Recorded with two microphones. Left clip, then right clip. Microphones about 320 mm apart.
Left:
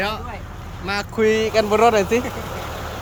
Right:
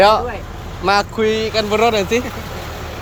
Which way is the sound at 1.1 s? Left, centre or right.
Centre.